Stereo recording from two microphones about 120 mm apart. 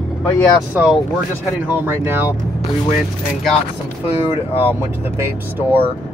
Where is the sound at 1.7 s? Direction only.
20° right (ahead or behind).